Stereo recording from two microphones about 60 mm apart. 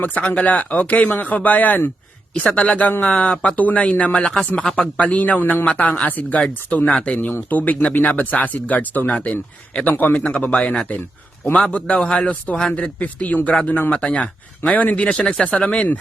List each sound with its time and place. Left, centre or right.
0.0 s speech: left
4.8 s speech: left